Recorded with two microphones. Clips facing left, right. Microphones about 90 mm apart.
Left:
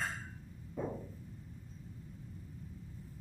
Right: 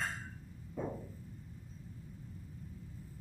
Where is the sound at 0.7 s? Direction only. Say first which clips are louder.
Left 1 dB; centre (ahead or behind).